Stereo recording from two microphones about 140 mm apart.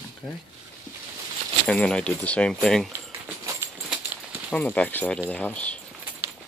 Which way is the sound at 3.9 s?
10° right (ahead or behind).